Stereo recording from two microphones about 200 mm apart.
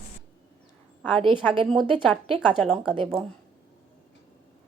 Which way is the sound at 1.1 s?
25° right (ahead or behind).